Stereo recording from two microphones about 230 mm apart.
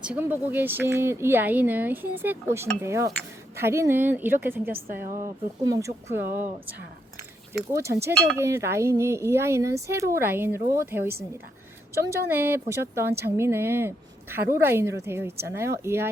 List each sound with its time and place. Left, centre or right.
0.0 s a woman's voice: centre
4.7 s a woman's voice: right
5.6 s a woman's voice: centre
7.7 s a woman's voice: centre